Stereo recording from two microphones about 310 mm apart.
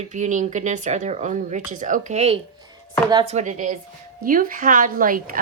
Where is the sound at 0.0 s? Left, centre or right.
Right.